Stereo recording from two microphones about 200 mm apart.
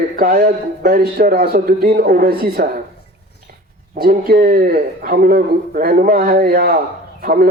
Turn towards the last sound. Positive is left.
turn(degrees=-45)  # may be behind; listen again after turning